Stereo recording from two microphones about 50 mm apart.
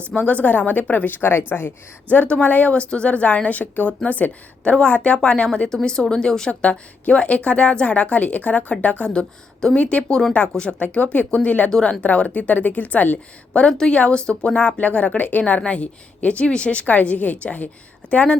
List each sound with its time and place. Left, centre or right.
0.2 s a woman's voice: left
10.8 s speech: left
13.5 s speech: centre